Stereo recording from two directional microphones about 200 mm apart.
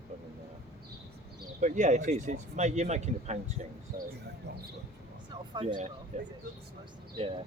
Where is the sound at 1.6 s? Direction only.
35° right (ahead or behind).